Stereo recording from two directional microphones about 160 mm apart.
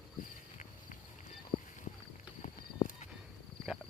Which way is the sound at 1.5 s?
65° left (ahead or behind).